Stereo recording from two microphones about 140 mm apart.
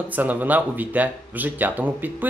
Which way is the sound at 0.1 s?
10° right (ahead or behind).